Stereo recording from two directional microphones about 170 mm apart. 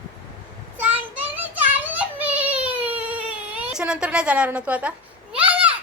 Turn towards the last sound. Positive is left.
turn(degrees=-5)  # may be behind; listen again after turning